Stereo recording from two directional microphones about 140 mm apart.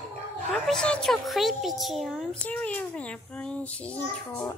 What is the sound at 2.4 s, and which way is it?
A child's voice, 10° left (ahead or behind).